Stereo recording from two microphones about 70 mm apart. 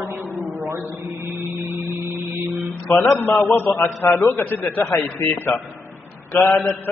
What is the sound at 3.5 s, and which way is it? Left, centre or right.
Speech, left.